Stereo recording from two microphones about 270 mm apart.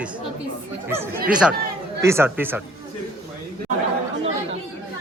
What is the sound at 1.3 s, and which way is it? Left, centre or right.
Speech, centre.